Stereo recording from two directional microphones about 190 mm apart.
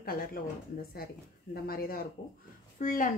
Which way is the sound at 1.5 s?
50° left (ahead or behind).